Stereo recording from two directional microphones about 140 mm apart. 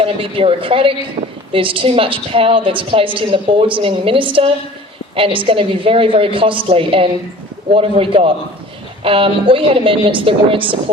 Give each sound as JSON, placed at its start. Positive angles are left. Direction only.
{"t": 0.0, "sound": "a woman's voice", "side_deg": -40}